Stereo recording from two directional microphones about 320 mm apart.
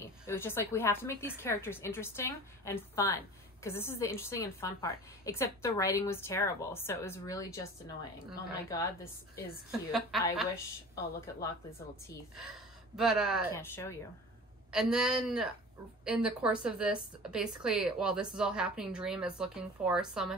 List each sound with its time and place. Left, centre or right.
0.0 s a woman's voice: centre
9.7 s speech: centre
12.4 s speech: centre
14.7 s speech: centre